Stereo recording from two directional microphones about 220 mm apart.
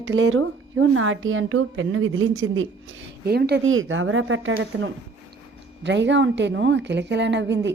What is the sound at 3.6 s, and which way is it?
A woman's voice, 65° right (ahead or behind).